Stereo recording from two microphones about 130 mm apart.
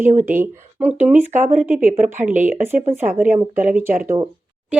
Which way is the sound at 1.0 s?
10° right (ahead or behind).